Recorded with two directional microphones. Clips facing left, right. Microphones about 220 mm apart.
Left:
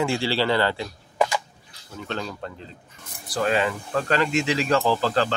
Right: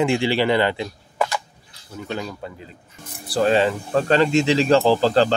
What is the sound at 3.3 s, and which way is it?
Speech, 30° right (ahead or behind).